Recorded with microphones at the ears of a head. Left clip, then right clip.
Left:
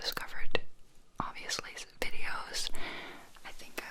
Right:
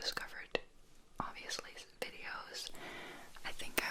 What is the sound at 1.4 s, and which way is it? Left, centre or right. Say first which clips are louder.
Whispering: left 6 dB; left.